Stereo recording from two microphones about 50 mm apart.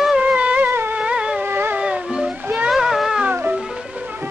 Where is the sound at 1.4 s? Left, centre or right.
Right.